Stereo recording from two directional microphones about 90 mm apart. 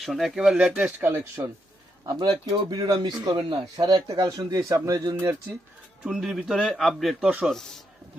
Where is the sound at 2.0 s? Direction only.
50° right (ahead or behind); by 5.4 s 35° right (ahead or behind).